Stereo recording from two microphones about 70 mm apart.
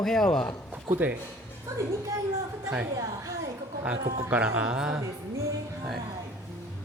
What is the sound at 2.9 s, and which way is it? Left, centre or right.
Speech, right.